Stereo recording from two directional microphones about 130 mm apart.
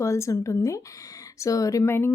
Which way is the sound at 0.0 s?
25° left (ahead or behind).